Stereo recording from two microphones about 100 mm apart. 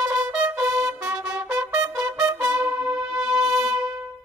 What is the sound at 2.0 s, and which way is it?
Trumpet, 30° right (ahead or behind).